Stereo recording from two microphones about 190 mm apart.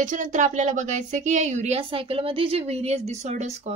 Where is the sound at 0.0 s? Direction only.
45° right (ahead or behind).